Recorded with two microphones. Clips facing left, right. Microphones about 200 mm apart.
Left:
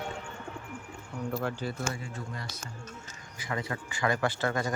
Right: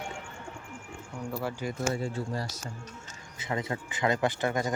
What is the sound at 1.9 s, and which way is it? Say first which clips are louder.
Speech: right 7 dB; 35° right (ahead or behind).